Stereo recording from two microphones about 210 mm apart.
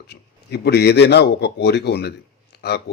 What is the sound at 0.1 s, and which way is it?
A man's voice, 50° left (ahead or behind).